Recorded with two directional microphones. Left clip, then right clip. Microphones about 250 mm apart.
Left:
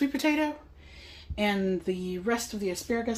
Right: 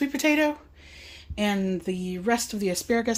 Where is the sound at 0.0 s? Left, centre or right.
Right.